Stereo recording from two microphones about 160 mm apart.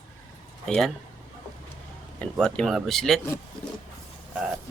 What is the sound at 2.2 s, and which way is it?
Speech, 5° left (ahead or behind).